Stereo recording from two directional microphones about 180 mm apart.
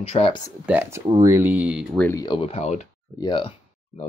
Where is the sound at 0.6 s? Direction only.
10° right (ahead or behind).